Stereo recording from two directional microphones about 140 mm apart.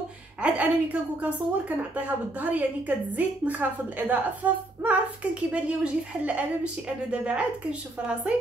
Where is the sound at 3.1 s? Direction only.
10° right (ahead or behind).